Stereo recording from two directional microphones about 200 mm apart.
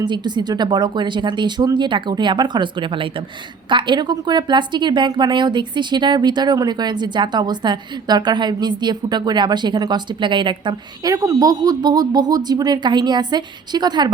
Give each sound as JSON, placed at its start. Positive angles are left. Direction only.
{"t": 0.0, "sound": "a woman's voice", "side_deg": -20}